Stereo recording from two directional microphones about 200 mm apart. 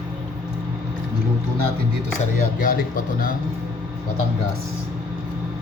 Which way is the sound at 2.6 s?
45° left (ahead or behind).